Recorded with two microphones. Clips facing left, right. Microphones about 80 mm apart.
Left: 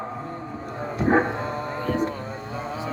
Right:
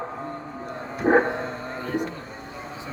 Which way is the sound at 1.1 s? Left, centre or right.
Right.